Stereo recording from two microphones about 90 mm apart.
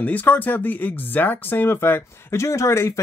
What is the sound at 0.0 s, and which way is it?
Speech, 20° left (ahead or behind).